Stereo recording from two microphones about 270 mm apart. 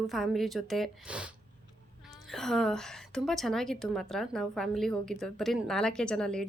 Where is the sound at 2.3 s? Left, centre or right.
Centre.